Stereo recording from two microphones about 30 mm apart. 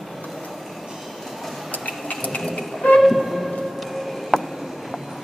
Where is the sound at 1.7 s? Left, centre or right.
Left.